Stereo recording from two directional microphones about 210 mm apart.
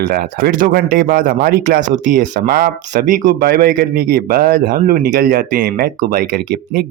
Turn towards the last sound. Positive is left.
turn(degrees=-45)  # may be behind; listen again after turning